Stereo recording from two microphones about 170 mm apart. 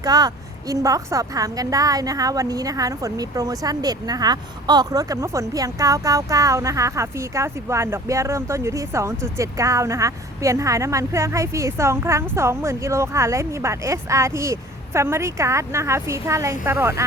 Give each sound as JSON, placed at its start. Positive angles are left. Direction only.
{"t": 0.0, "sound": "a woman's voice", "side_deg": -25}